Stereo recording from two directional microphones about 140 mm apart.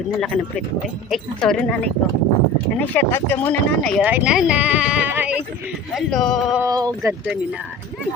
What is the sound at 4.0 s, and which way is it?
Speech, 10° right (ahead or behind).